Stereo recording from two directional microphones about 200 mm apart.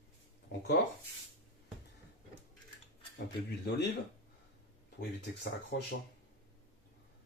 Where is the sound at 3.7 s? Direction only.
55° left (ahead or behind).